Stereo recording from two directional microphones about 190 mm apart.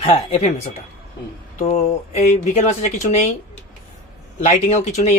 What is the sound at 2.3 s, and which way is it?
Speech, 35° left (ahead or behind).